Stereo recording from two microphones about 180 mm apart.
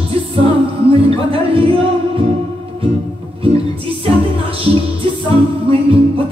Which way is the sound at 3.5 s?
30° right (ahead or behind).